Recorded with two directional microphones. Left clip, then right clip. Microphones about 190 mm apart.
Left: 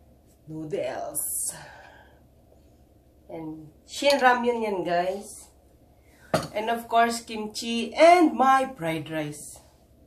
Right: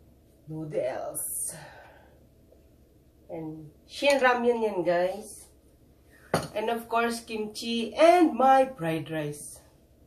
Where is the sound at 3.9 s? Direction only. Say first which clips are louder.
Left 2 dB; 25° left (ahead or behind).